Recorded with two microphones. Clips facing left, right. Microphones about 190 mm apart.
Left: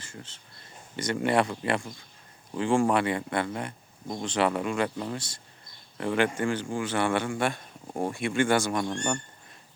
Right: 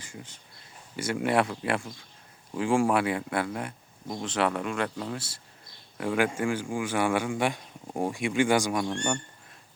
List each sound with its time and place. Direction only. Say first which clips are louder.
0.0 s speech: right 1 dB; 15° right (ahead or behind)